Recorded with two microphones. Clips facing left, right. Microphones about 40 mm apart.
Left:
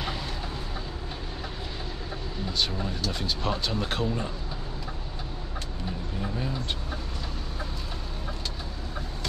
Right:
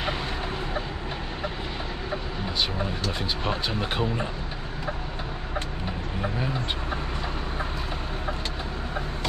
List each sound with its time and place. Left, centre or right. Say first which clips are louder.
2.8 s speech: right 2 dB; right
6.2 s speech: right 3 dB; right